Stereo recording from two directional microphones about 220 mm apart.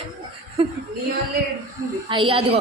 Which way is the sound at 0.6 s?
25° right (ahead or behind).